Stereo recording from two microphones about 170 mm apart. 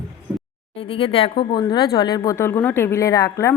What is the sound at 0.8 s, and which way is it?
A woman's voice, 30° left (ahead or behind).